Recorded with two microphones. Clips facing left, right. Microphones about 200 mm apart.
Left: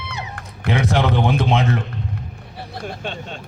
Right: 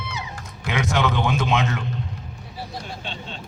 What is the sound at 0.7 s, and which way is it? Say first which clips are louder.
Speech: left 4 dB; 30° left (ahead or behind).